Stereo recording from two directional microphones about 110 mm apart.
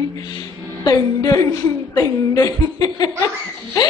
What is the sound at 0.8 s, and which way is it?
A woman's voice, 35° left (ahead or behind).